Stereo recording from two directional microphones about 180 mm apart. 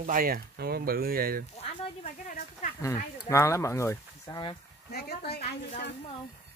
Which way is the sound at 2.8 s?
15° left (ahead or behind).